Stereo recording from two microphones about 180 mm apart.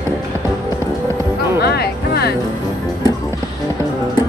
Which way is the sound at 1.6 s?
60° left (ahead or behind).